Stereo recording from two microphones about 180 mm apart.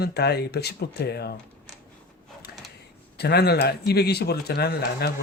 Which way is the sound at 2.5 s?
60° left (ahead or behind).